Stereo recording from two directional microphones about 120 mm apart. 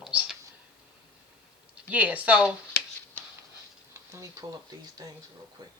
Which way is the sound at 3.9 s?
25° right (ahead or behind).